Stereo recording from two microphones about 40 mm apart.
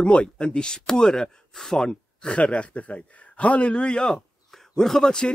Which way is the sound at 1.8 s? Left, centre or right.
Left.